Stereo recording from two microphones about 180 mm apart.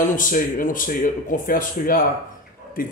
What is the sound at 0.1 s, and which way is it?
Speech, 50° left (ahead or behind).